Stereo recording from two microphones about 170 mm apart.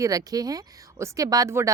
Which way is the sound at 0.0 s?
20° right (ahead or behind).